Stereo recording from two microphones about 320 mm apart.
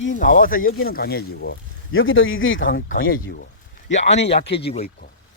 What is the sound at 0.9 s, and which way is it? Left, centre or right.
Speech, left.